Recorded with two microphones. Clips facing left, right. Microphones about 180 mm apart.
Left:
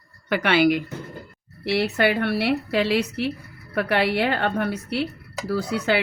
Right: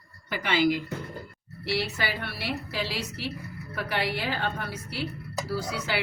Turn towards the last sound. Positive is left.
turn(degrees=60)  # may be behind; listen again after turning